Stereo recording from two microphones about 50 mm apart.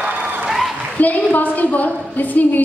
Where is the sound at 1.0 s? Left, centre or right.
Left.